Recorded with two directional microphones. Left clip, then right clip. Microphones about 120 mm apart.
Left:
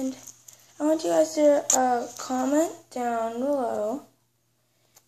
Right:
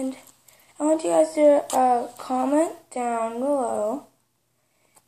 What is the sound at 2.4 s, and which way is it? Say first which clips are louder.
Speech: right 2 dB; 25° left (ahead or behind).